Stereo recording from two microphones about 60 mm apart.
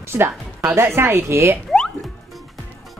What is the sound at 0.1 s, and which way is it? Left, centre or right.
Speech, right.